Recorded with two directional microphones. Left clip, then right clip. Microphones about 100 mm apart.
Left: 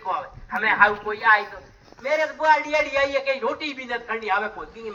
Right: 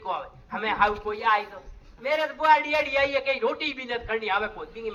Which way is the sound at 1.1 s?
15° right (ahead or behind).